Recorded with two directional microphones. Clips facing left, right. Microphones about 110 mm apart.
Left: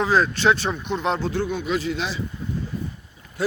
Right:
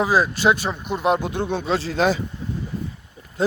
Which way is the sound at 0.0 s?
10° right (ahead or behind).